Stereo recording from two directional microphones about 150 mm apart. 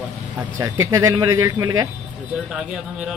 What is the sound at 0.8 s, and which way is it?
Speech, 20° right (ahead or behind).